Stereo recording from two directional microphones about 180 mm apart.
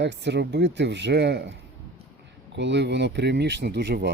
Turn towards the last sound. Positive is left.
turn(degrees=-70)  # may be behind; listen again after turning